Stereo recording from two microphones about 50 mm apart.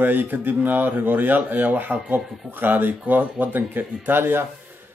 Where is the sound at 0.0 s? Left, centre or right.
Right.